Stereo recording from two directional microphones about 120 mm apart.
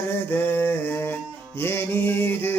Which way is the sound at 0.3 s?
20° left (ahead or behind).